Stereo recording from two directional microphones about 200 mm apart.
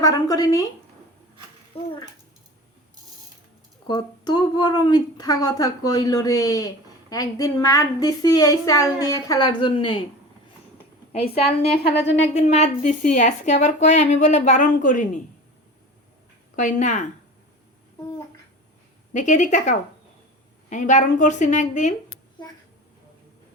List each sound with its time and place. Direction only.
0.0 s speech: 20° left (ahead or behind)
1.7 s a sound: 30° left (ahead or behind)
3.8 s speech: 20° left (ahead or behind)
11.4 s speech: 30° left (ahead or behind)
11.9 s speech: 60° left (ahead or behind)
12.2 s a woman's voice: 30° left (ahead or behind)
16.6 s a woman's voice: 40° left (ahead or behind)
19.1 s a woman's voice: 40° left (ahead or behind)